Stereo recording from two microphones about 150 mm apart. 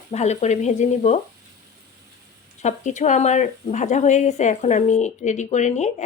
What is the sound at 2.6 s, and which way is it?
Speech, 50° left (ahead or behind).